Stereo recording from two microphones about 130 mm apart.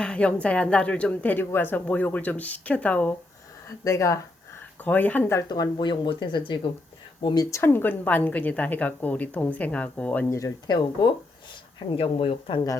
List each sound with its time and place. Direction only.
0.0 s a woman's voice: 10° left (ahead or behind)
3.8 s speech: 25° left (ahead or behind)
4.8 s a woman's voice: 10° left (ahead or behind)
5.7 s speech: 35° left (ahead or behind)
7.5 s a woman's voice: 15° left (ahead or behind)
10.2 s speech: 25° left (ahead or behind)
11.9 s speech: 45° left (ahead or behind)